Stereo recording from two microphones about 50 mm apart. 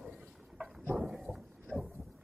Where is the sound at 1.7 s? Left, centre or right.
Right.